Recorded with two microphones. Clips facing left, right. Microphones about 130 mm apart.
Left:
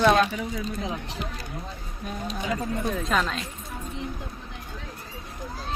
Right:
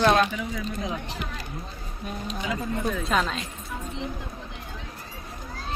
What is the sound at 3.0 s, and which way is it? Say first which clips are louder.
Speech: even; centre (ahead or behind).